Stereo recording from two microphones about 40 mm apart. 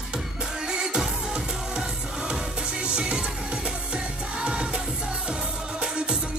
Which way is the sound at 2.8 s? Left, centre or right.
Right.